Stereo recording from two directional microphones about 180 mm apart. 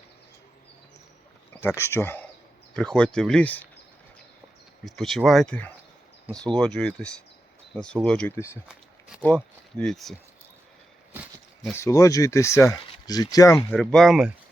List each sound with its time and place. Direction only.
1.6 s speech: 15° left (ahead or behind)
4.9 s speech: centre (ahead or behind)
11.8 s speech: 15° left (ahead or behind)
13.7 s speech: 5° left (ahead or behind)